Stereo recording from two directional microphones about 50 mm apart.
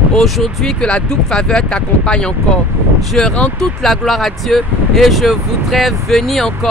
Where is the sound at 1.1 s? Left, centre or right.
Centre.